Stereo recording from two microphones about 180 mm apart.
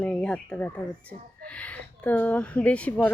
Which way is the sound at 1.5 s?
5° left (ahead or behind).